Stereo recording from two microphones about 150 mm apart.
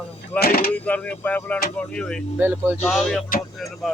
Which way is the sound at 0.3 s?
90° left.